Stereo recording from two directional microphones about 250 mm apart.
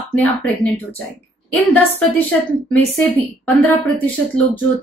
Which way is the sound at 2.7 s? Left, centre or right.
Centre.